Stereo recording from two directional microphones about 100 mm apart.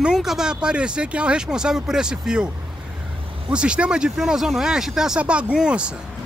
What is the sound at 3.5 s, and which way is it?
Speech, 10° right (ahead or behind).